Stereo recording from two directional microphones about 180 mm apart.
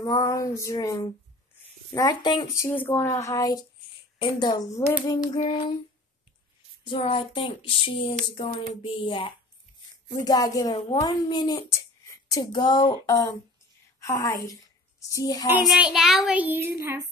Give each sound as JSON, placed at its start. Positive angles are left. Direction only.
{"t": 0.0, "sound": "a sound", "side_deg": 20}
{"t": 1.9, "sound": "a woman's voice", "side_deg": 20}
{"t": 2.6, "sound": "a sound", "side_deg": 10}
{"t": 4.2, "sound": "a woman's voice", "side_deg": 25}
{"t": 6.8, "sound": "a woman's voice", "side_deg": 30}
{"t": 15.6, "sound": "a child's voice", "side_deg": 0}